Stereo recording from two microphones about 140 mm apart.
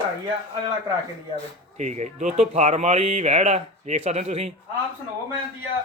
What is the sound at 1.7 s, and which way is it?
Speech, 55° right (ahead or behind).